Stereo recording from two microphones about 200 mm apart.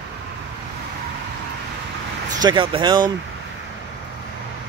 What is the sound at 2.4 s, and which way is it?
Speech, 25° right (ahead or behind).